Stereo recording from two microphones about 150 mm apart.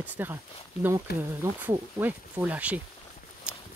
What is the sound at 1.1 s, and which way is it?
Speech, 90° left.